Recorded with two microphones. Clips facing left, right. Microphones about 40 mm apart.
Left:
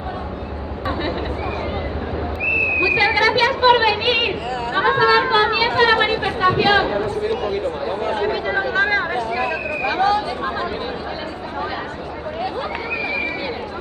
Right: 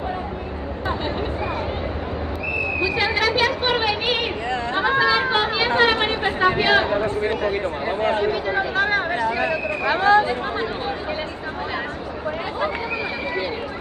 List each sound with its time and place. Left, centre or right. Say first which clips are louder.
2.8 s a sound: left 4 dB; centre
5.8 s speech: left 3 dB; centre
6.1 s speech: left 2 dB; right
8.3 s speech: left 2 dB; centre
10.0 s speech: right 4 dB; right